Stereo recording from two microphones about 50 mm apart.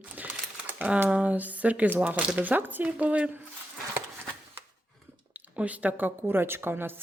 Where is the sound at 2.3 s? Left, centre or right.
Right.